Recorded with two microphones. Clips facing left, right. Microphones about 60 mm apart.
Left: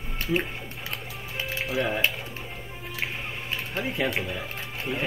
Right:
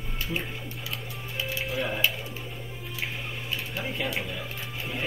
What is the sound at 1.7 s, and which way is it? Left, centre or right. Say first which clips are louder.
Speech: left 5 dB; left.